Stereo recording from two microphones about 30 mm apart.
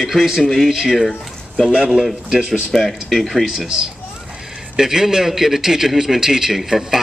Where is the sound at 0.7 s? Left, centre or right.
Centre.